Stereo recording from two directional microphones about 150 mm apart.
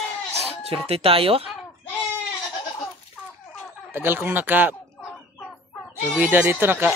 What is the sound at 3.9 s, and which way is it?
Speech, 15° right (ahead or behind).